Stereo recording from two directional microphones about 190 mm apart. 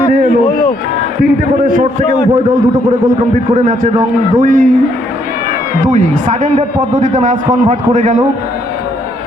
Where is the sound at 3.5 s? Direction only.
40° right (ahead or behind).